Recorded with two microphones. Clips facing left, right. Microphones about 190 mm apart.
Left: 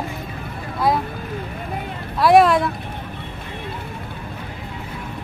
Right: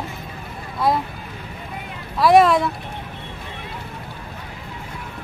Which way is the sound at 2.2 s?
Centre (ahead or behind).